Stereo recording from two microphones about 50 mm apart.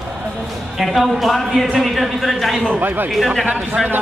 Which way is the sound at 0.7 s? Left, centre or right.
Centre.